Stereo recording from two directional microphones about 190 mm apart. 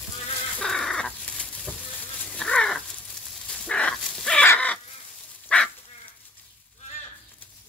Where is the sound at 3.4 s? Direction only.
5° left (ahead or behind).